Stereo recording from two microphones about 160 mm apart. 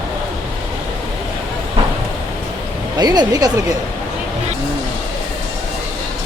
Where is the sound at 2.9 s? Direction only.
25° right (ahead or behind).